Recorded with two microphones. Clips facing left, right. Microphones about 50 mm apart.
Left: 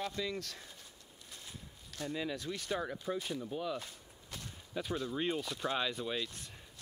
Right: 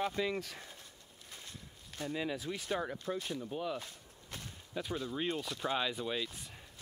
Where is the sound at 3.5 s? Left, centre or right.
Centre.